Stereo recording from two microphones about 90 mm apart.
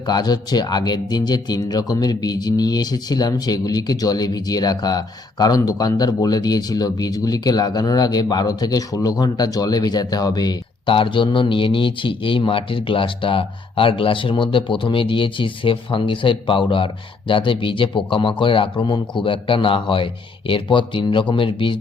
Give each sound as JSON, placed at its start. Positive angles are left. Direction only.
{"t": 0.0, "sound": "speech", "side_deg": 50}
{"t": 10.8, "sound": "speech", "side_deg": 70}